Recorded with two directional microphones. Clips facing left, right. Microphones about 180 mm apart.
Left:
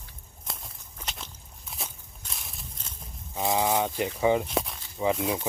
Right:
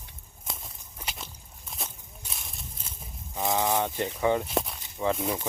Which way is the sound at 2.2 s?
Centre (ahead or behind).